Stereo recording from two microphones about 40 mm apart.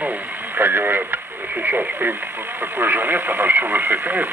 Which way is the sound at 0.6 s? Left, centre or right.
Right.